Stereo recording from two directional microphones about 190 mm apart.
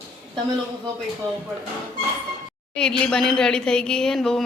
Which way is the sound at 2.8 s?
5° left (ahead or behind).